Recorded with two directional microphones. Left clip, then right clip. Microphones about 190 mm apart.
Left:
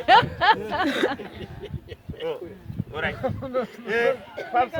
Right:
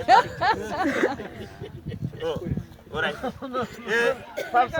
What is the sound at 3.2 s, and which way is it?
Speech, 20° left (ahead or behind).